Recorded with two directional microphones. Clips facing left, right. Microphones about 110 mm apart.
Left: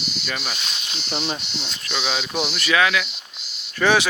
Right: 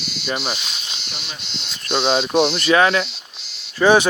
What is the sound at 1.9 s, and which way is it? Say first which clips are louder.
Speech: right 9 dB; 30° right (ahead or behind).